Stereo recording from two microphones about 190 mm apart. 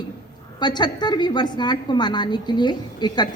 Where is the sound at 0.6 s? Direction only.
20° left (ahead or behind).